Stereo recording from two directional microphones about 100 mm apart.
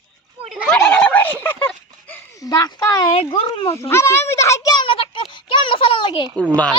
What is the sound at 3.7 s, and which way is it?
A child's voice, 25° left (ahead or behind).